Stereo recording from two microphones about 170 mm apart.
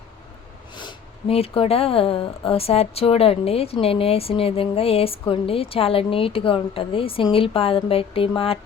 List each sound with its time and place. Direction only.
0.8 s speech: 30° left (ahead or behind)